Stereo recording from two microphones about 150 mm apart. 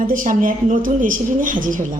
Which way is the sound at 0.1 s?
65° right (ahead or behind).